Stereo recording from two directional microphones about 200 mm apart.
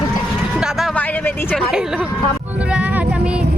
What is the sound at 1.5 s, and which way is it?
Speech, centre (ahead or behind).